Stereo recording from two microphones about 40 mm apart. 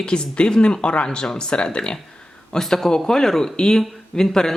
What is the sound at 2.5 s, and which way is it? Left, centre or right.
Speech, centre.